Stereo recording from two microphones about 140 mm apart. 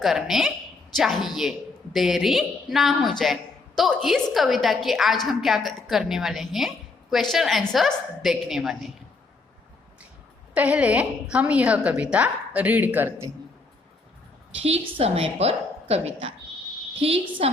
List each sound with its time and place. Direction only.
0.0 s a woman's voice: centre (ahead or behind)
10.5 s a woman's voice: 10° right (ahead or behind)
14.6 s a woman's voice: 45° right (ahead or behind)